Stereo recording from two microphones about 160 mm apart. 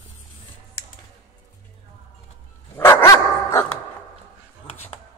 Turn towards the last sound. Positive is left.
turn(degrees=15)  # may be behind; listen again after turning